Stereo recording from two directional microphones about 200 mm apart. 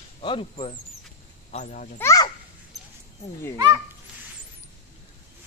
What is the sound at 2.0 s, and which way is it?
Speech, 15° left (ahead or behind).